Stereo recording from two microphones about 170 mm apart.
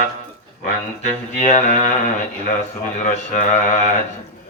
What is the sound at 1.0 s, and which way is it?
Speech, 45° left (ahead or behind).